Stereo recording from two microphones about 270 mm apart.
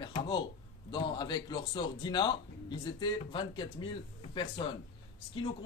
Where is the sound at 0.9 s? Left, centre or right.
Centre.